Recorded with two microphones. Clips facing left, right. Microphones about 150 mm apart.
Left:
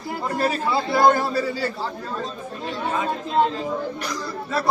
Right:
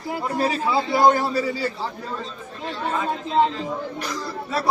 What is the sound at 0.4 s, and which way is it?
Speech, 15° right (ahead or behind).